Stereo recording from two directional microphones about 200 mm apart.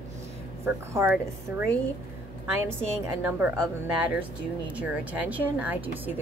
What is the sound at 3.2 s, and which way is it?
A woman's voice, 10° right (ahead or behind).